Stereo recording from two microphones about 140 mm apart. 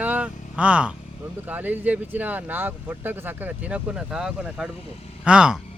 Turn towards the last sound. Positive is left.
turn(degrees=-5)  # may be behind; listen again after turning